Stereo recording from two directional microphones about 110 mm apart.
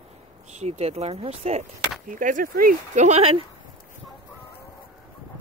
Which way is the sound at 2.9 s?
90° right.